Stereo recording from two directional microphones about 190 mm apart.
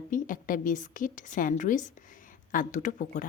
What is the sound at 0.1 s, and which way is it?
A woman's voice, 45° left (ahead or behind).